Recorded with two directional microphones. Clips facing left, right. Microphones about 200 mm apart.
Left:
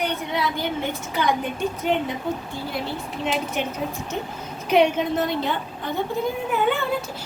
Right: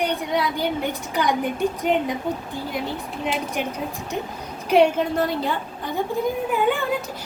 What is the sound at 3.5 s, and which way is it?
A woman's voice, 10° right (ahead or behind).